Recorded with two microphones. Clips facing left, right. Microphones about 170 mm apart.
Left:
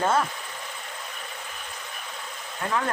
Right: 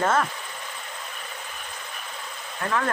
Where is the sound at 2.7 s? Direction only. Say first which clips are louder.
Right 1 dB; 20° left (ahead or behind).